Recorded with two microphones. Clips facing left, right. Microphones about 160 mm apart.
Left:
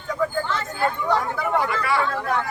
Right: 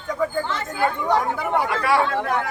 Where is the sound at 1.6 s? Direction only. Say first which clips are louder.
Right 3 dB; 70° right (ahead or behind).